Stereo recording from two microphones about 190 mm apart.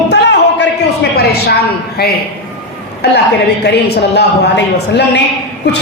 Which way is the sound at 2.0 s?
55° left (ahead or behind).